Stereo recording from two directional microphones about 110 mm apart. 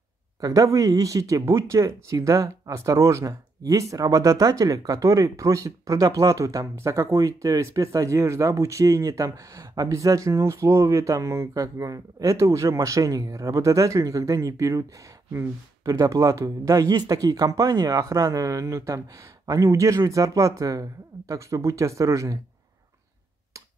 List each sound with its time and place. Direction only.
0.4 s speech: 30° right (ahead or behind)